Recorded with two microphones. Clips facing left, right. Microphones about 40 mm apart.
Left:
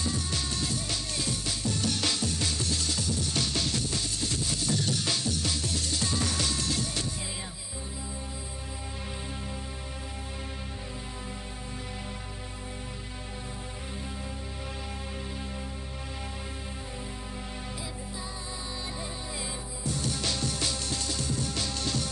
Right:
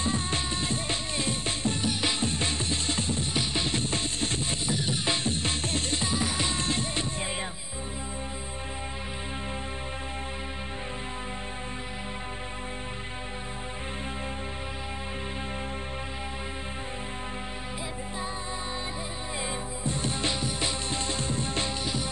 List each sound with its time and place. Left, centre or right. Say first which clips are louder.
0.0 s music: right 3 dB; right
1.9 s music: right 1 dB; right
4.6 s music: right 1 dB; right
6.0 s music: right 2 dB; centre
19.8 s music: right 1 dB; right
21.8 s music: right 1 dB; centre